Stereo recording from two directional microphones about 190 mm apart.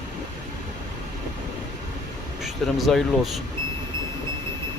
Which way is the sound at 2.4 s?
Centre (ahead or behind).